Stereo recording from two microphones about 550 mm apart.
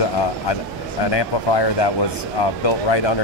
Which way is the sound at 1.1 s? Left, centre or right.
Left.